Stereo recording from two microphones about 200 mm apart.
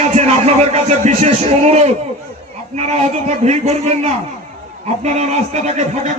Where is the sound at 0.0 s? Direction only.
35° right (ahead or behind).